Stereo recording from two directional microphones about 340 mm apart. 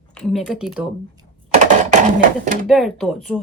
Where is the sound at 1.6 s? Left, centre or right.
Right.